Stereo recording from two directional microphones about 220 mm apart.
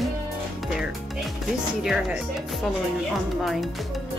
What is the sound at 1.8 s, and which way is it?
Speech, 5° right (ahead or behind).